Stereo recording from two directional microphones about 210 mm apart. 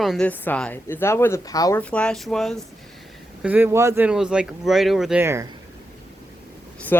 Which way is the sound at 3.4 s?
10° right (ahead or behind).